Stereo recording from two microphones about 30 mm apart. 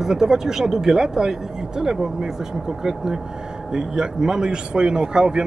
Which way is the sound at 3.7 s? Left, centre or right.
Centre.